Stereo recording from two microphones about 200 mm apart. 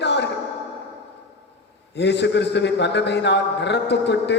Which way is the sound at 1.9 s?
60° left (ahead or behind).